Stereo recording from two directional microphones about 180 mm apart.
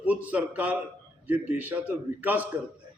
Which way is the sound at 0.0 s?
10° right (ahead or behind).